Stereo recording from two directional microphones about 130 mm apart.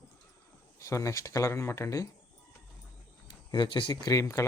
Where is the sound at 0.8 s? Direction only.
25° left (ahead or behind).